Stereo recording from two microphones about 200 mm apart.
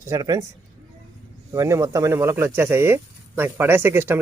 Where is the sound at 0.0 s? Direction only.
15° right (ahead or behind).